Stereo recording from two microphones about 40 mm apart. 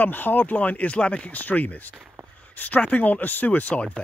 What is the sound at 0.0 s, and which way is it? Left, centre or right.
Speech, left.